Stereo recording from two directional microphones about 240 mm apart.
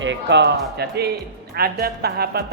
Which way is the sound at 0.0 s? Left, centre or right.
Right.